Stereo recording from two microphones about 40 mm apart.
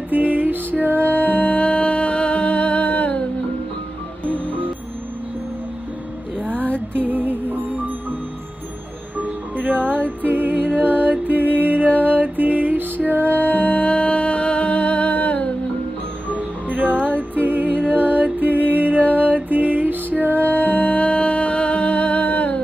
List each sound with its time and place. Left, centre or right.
0.1 s music: right
1.0 s music: left
6.4 s music: right
9.2 s music: right
13.3 s music: left
17.0 s music: right
20.4 s music: left